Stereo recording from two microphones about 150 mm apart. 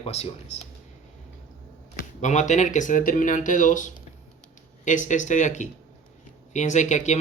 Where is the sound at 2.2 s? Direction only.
55° left (ahead or behind).